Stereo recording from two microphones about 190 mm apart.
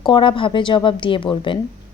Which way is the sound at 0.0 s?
25° left (ahead or behind).